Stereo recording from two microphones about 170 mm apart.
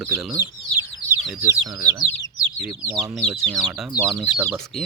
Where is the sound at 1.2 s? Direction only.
5° right (ahead or behind).